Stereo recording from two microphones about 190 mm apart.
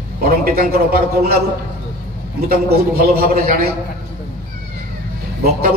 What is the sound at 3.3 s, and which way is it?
Speech, 50° right (ahead or behind).